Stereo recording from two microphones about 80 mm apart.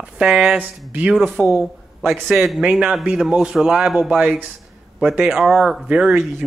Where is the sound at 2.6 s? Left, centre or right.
Centre.